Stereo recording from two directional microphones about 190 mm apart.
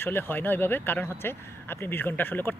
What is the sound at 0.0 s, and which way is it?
Speech, 10° left (ahead or behind).